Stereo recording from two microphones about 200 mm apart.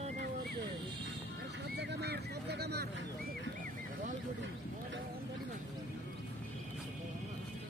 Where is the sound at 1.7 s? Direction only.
55° right (ahead or behind).